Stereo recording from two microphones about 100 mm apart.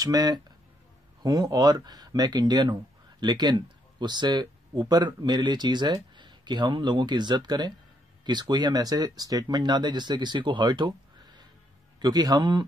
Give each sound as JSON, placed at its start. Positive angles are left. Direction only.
{"t": 0.0, "sound": "a man's voice", "side_deg": -40}